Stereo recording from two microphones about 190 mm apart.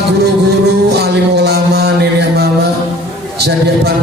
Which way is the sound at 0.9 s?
60° right (ahead or behind).